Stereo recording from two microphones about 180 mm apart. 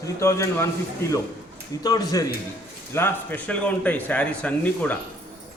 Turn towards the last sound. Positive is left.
turn(degrees=10)  # may be behind; listen again after turning